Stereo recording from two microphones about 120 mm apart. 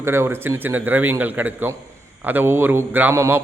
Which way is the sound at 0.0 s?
20° right (ahead or behind).